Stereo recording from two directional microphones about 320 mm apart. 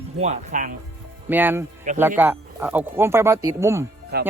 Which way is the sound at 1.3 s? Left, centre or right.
Centre.